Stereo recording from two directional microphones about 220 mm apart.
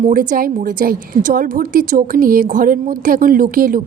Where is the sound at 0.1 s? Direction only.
40° right (ahead or behind).